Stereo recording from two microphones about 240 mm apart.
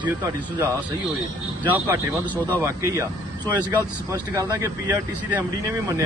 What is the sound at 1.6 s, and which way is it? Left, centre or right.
Speech, centre.